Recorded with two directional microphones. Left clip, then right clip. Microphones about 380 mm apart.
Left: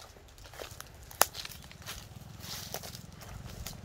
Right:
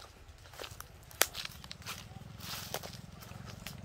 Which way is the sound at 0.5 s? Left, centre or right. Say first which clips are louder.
Left 1 dB; centre.